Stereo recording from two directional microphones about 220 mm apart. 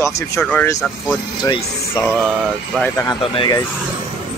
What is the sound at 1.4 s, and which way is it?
Speech, 15° left (ahead or behind).